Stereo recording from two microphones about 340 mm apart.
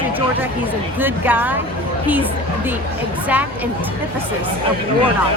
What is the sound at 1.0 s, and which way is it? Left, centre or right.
Speech, centre.